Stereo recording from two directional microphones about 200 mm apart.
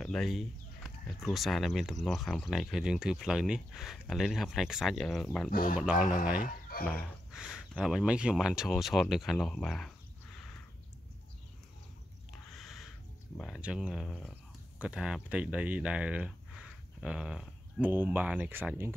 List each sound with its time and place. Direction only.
0.0 s chicken: centre (ahead or behind)
1.2 s speech: centre (ahead or behind)
5.5 s speech: 45° left (ahead or behind)
5.8 s speech: 5° right (ahead or behind)
6.4 s chicken: 45° left (ahead or behind)
6.9 s speech: centre (ahead or behind)
12.5 s a sound: centre (ahead or behind)
13.4 s speech: 5° right (ahead or behind)